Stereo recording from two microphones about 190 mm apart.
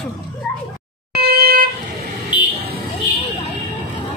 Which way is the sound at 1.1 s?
55° right (ahead or behind).